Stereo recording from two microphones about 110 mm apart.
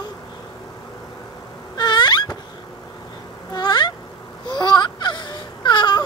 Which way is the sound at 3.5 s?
40° left (ahead or behind).